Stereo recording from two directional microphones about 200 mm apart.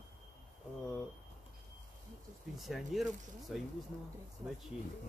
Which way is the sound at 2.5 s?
Centre (ahead or behind).